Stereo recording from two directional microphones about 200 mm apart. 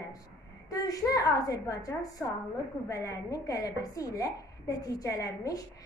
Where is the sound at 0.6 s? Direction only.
20° left (ahead or behind).